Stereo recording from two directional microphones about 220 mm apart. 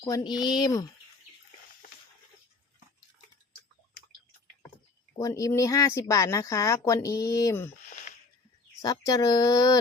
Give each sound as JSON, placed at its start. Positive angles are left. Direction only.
{"t": 0.0, "sound": "speech", "side_deg": 20}
{"t": 5.1, "sound": "speech", "side_deg": 15}
{"t": 7.9, "sound": "wheeze", "side_deg": 35}
{"t": 8.8, "sound": "speech", "side_deg": 15}